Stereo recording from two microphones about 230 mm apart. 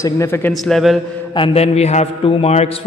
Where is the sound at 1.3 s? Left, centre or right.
Left.